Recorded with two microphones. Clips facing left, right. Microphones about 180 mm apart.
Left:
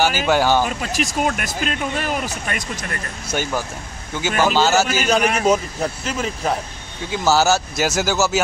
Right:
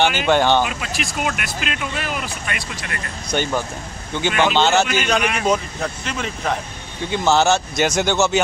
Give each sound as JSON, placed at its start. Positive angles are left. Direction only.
{"t": 0.0, "sound": "speech", "side_deg": 5}
{"t": 0.7, "sound": "speech", "side_deg": 40}
{"t": 3.3, "sound": "speech", "side_deg": 5}